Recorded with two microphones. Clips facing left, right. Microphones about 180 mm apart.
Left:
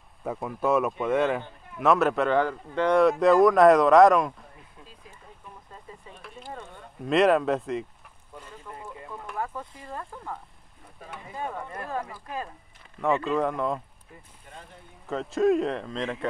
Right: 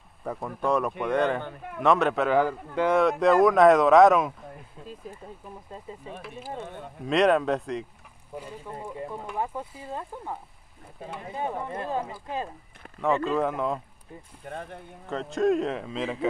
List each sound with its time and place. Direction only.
0.2 s speech: 5° left (ahead or behind)
6.2 s speech: 5° right (ahead or behind)
8.7 s a sound: 30° right (ahead or behind)
9.6 s speech: 10° right (ahead or behind)
9.9 s speech: 20° right (ahead or behind)
13.0 s speech: centre (ahead or behind)
14.4 s speech: 55° right (ahead or behind)
15.0 s speech: centre (ahead or behind)